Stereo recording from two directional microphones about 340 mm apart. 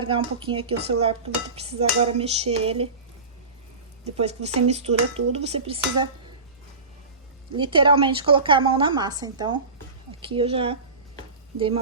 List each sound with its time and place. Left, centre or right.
0.0 s a woman's voice: centre
4.0 s a woman's voice: centre
7.5 s a woman's voice: centre